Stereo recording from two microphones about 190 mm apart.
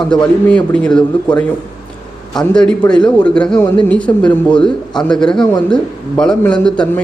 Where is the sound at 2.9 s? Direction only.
5° left (ahead or behind).